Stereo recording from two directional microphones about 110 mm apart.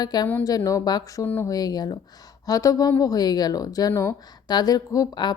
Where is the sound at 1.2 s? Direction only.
15° left (ahead or behind).